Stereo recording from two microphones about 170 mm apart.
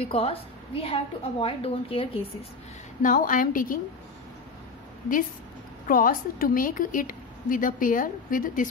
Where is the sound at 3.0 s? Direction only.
50° left (ahead or behind).